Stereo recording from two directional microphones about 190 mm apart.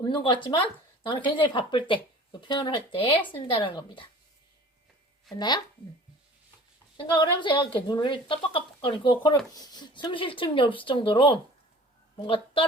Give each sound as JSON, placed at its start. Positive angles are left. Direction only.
{"t": 0.0, "sound": "a woman's voice", "side_deg": 25}
{"t": 5.4, "sound": "a woman's voice", "side_deg": 20}
{"t": 6.9, "sound": "a woman's voice", "side_deg": 25}